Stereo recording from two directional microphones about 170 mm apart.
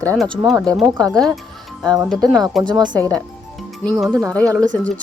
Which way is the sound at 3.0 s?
10° left (ahead or behind).